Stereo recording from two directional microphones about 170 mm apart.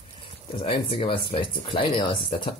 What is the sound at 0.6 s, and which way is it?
Speech, 30° left (ahead or behind).